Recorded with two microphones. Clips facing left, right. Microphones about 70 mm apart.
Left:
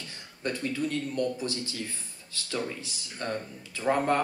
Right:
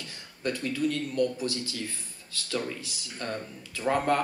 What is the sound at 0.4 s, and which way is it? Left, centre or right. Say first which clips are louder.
A man's voice: right 2 dB; left.